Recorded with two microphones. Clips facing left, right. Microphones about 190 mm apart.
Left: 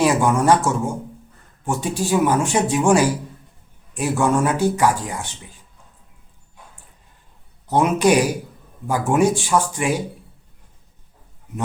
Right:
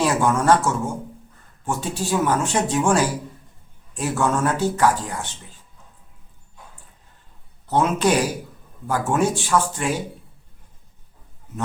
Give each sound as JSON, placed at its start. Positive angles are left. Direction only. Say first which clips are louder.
{"t": 0.0, "sound": "speech", "louder": "left 2 dB", "side_deg": 15}
{"t": 7.7, "sound": "speech", "louder": "left 3 dB", "side_deg": 15}